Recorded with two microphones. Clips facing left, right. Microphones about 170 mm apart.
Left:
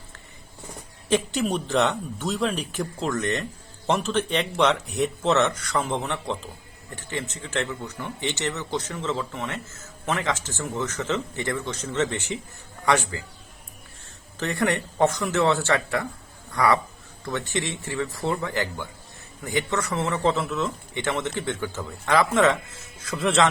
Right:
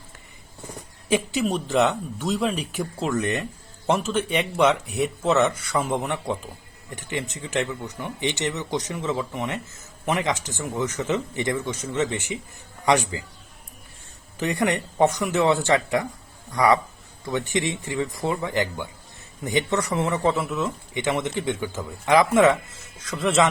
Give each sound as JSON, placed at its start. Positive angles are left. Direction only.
{"t": 1.0, "sound": "a man's voice", "side_deg": -5}
{"t": 14.3, "sound": "speech", "side_deg": -15}
{"t": 23.0, "sound": "speech", "side_deg": 0}